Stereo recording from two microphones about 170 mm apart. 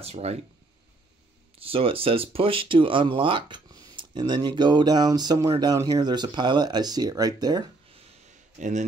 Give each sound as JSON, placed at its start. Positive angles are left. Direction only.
{"t": 0.0, "sound": "speech", "side_deg": -35}
{"t": 1.6, "sound": "speech", "side_deg": -35}
{"t": 8.5, "sound": "speech", "side_deg": -45}